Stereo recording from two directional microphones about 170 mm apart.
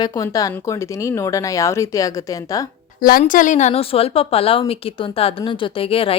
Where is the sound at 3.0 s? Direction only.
55° left (ahead or behind).